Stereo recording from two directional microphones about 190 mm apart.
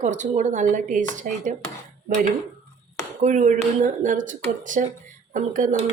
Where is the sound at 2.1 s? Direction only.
45° right (ahead or behind).